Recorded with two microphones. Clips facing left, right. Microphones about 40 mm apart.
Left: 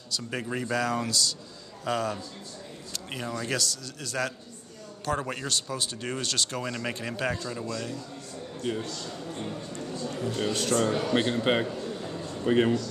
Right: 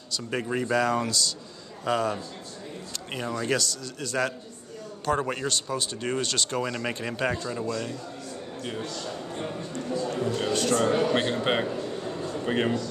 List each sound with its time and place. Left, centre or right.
0.1 s a man's voice: centre
10.8 s a man's voice: centre
11.6 s a sound: centre
12.4 s a man's voice: centre